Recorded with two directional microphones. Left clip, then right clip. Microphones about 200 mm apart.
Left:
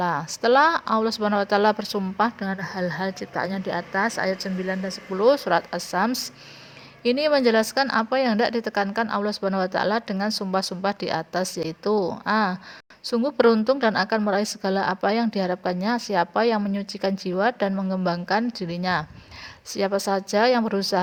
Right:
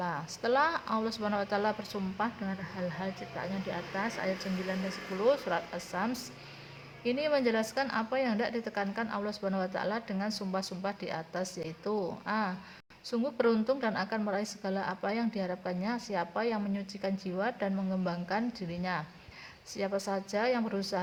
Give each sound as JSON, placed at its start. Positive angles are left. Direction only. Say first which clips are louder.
{"t": 0.0, "sound": "speech", "louder": "left 11 dB", "side_deg": 40}